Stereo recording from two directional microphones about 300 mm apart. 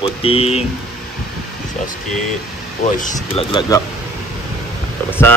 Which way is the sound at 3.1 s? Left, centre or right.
Centre.